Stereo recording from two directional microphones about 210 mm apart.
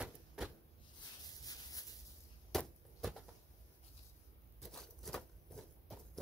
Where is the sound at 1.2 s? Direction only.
15° left (ahead or behind).